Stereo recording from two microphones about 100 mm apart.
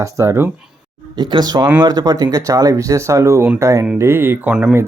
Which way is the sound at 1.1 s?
50° right (ahead or behind).